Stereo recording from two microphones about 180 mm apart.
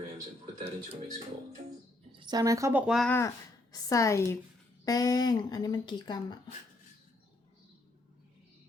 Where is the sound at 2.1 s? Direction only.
20° right (ahead or behind).